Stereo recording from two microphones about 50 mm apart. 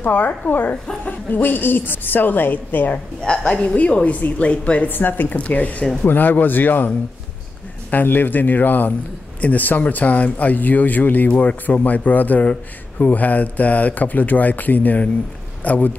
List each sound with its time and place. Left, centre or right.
0.0 s speech: left
3.2 s a woman's voice: centre
4.8 s speech: left
5.4 s speech: left
7.9 s a man's voice: left